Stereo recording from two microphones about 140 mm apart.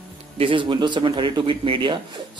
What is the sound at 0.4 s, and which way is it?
Speech, 40° right (ahead or behind).